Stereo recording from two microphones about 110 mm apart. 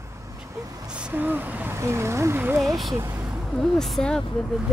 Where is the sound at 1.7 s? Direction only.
25° right (ahead or behind).